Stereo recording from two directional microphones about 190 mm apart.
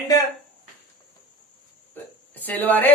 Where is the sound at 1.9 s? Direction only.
10° left (ahead or behind).